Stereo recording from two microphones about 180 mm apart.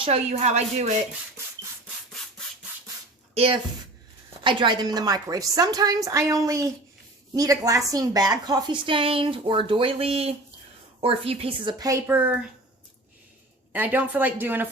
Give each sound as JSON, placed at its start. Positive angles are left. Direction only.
{"t": 0.0, "sound": "speech", "side_deg": -35}
{"t": 3.3, "sound": "a woman's voice", "side_deg": -30}
{"t": 13.7, "sound": "speech", "side_deg": -10}